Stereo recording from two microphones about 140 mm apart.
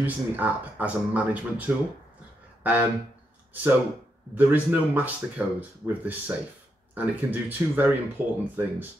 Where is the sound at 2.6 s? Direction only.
10° right (ahead or behind).